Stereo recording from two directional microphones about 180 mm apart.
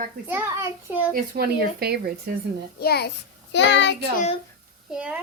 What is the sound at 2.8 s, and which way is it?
Speech, 60° left (ahead or behind).